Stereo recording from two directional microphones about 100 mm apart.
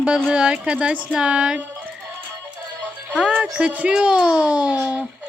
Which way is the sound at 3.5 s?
10° right (ahead or behind).